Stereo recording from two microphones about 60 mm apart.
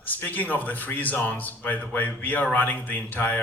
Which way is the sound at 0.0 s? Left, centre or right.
Left.